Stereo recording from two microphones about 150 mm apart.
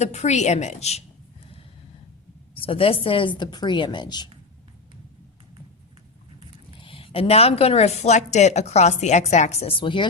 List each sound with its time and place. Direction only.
0.0 s a woman's voice: 50° left (ahead or behind)
2.6 s a woman's voice: 40° left (ahead or behind)
6.7 s a woman's voice: 35° left (ahead or behind)